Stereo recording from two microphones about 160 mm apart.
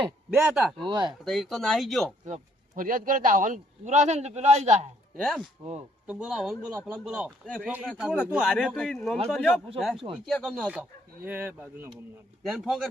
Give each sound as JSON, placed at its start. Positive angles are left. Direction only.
{"t": 0.0, "sound": "speech", "side_deg": -10}
{"t": 0.9, "sound": "speech", "side_deg": -30}
{"t": 1.2, "sound": "speech", "side_deg": 0}
{"t": 2.2, "sound": "a man's voice", "side_deg": -55}
{"t": 5.1, "sound": "speech", "side_deg": 0}
{"t": 7.3, "sound": "speech", "side_deg": 5}
{"t": 7.6, "sound": "a man's voice", "side_deg": -10}
{"t": 11.2, "sound": "speech", "side_deg": -10}